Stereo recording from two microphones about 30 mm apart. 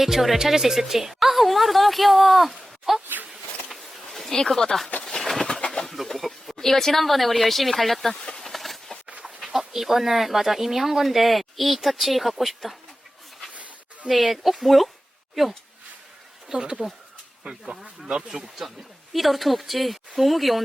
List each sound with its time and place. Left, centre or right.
0.0 s speech: centre
4.3 s speech: centre
5.0 s bird: centre
5.8 s a sound: centre
6.1 s speech: centre
6.6 s speech: centre
8.1 s speech: centre
8.4 s a sound: centre
9.4 s speech: centre
13.5 s a sound: right
14.1 s speech: centre
16.5 s speech: right
18.4 s speech: centre